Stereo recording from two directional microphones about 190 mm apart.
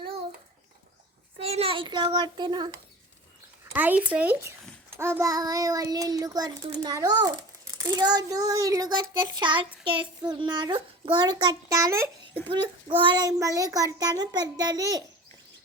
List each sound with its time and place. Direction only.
1.4 s a child's voice: 30° right (ahead or behind)
3.7 s a child's voice: 10° right (ahead or behind)
12.5 s a child's voice: 25° right (ahead or behind)